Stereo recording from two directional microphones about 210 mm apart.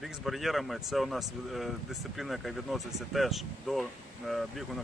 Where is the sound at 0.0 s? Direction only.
Centre (ahead or behind).